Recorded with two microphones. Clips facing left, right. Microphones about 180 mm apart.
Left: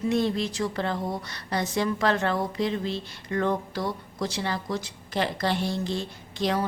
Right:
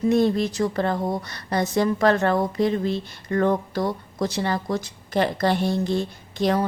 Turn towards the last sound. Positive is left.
turn(degrees=-50)  # may be behind; listen again after turning